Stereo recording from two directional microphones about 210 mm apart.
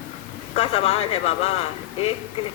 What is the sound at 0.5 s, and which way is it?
Speech, 30° left (ahead or behind).